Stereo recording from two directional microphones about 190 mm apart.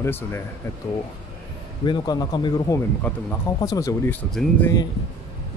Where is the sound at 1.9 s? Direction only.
20° left (ahead or behind).